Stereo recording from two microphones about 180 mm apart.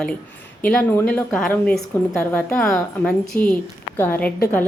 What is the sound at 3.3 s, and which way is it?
Speech, 10° left (ahead or behind).